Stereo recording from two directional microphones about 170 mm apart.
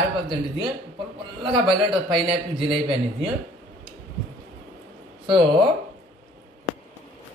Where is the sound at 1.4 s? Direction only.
30° right (ahead or behind).